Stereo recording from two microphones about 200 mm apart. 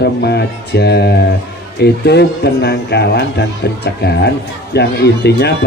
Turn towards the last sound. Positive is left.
turn(degrees=55)  # may be behind; listen again after turning